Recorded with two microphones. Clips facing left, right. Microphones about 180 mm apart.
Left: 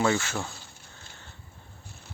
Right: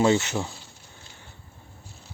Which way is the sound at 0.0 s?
20° right (ahead or behind).